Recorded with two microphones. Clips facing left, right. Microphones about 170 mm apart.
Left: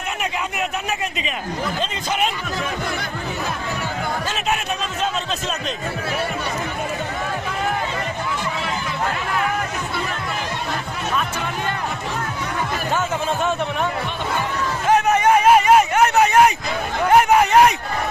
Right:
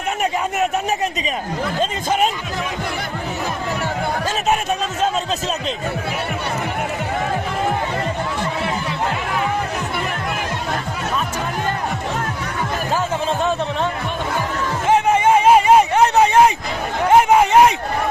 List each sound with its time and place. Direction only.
0.2 s speech: 40° right (ahead or behind)
14.8 s a sound: 25° right (ahead or behind)
17.1 s speech: 25° right (ahead or behind)